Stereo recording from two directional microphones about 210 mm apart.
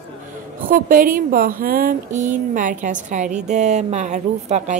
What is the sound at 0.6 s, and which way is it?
A woman's voice, 40° right (ahead or behind).